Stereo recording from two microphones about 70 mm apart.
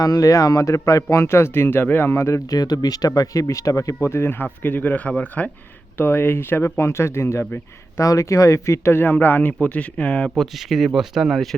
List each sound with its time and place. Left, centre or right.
0.0 s speech: left
1.1 s speech: left
2.6 s speech: left
3.2 s speech: left
6.0 s speech: left; by 10.3 s centre
10.3 s speech: centre